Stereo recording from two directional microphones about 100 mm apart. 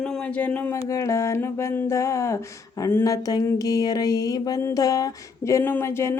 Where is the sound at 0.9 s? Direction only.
30° left (ahead or behind).